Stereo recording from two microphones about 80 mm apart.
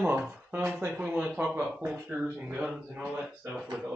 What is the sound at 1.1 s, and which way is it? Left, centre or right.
Speech, centre.